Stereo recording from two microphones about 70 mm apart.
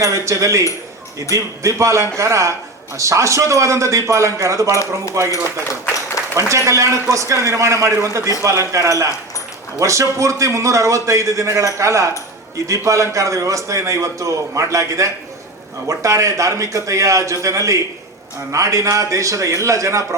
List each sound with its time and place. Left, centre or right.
0.0 s a man's voice: right
5.9 s a sound: left
6.7 s a man's voice: right